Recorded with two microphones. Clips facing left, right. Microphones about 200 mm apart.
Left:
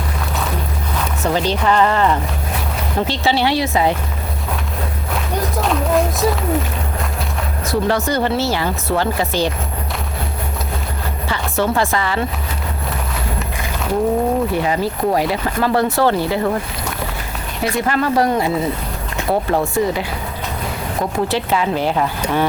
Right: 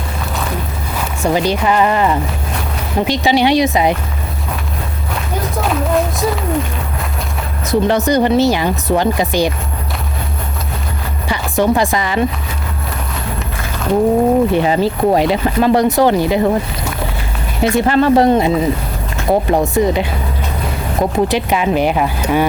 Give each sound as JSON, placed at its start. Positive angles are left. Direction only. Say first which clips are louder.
{"t": 1.2, "sound": "speech", "louder": "right 3 dB", "side_deg": -10}
{"t": 5.5, "sound": "music", "louder": "right 1 dB", "side_deg": 0}
{"t": 7.7, "sound": "speech", "louder": "right 5 dB", "side_deg": -20}
{"t": 11.3, "sound": "speech", "louder": "right 5 dB", "side_deg": -15}
{"t": 14.5, "sound": "speech", "louder": "right 5 dB", "side_deg": -25}
{"t": 17.6, "sound": "speech", "louder": "right 6 dB", "side_deg": -25}